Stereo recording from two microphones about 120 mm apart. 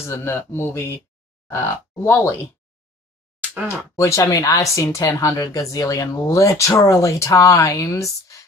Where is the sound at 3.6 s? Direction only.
25° left (ahead or behind).